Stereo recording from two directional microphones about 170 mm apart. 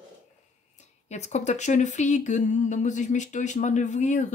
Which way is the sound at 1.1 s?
40° left (ahead or behind).